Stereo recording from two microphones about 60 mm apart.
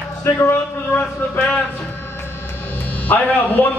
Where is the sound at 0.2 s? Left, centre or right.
Left.